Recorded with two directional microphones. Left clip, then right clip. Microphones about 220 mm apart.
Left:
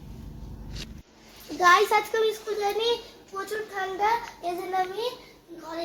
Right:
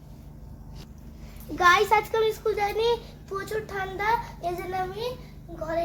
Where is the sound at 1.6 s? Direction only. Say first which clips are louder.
Even; 15° right (ahead or behind).